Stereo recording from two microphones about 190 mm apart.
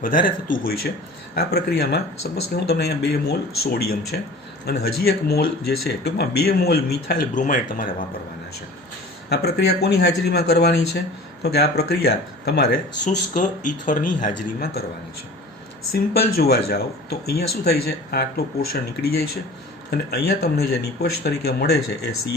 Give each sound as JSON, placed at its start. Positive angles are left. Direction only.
{"t": 0.4, "sound": "speech", "side_deg": 45}
{"t": 9.3, "sound": "speech", "side_deg": 60}
{"t": 13.1, "sound": "speech", "side_deg": 40}
{"t": 16.1, "sound": "speech", "side_deg": 55}
{"t": 19.9, "sound": "speech", "side_deg": 55}